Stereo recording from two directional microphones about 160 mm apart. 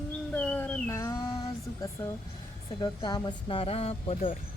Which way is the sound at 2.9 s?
30° left (ahead or behind).